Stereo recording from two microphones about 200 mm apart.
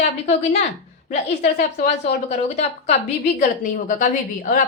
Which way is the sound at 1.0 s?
35° left (ahead or behind).